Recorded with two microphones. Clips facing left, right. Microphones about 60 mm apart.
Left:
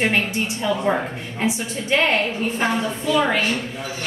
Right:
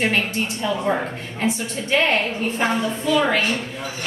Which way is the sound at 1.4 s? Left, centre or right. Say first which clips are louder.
Even; centre.